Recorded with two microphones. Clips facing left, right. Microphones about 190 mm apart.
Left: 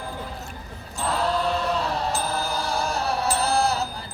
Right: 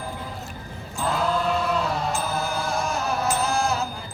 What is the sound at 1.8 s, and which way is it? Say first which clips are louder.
Music: even; 35° left (ahead or behind).